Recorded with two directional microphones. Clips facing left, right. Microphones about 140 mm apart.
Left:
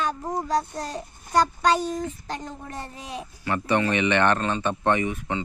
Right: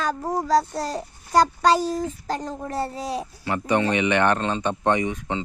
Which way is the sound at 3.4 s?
15° right (ahead or behind).